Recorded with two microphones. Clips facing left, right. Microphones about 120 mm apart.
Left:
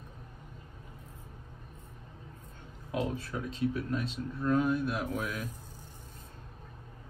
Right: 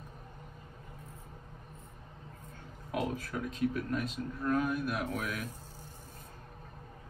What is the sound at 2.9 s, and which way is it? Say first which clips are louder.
Speech: left 1 dB; 25° left (ahead or behind).